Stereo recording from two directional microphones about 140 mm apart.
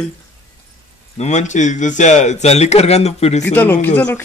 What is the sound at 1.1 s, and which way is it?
A man's voice, 55° left (ahead or behind).